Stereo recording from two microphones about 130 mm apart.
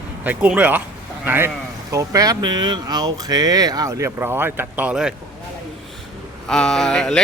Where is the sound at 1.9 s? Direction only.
25° right (ahead or behind); by 5.1 s 5° right (ahead or behind).